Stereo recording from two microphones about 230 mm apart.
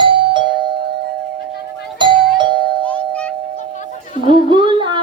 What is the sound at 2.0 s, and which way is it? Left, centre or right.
Music, right.